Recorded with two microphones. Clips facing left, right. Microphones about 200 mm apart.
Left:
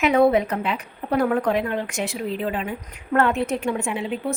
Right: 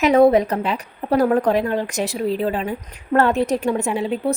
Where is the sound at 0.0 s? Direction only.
40° right (ahead or behind).